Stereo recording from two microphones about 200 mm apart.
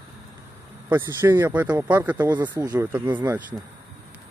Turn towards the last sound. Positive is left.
turn(degrees=-10)  # may be behind; listen again after turning